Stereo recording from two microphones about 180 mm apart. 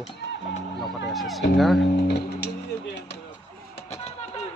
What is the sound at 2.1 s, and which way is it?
Speech, 65° left (ahead or behind).